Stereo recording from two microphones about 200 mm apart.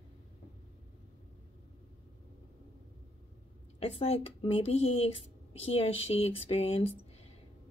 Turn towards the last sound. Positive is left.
turn(degrees=30)  # may be behind; listen again after turning